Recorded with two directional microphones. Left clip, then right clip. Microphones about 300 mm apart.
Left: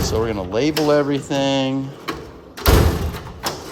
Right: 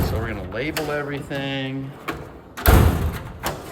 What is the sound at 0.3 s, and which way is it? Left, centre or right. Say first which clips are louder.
Speech: left 7 dB; centre.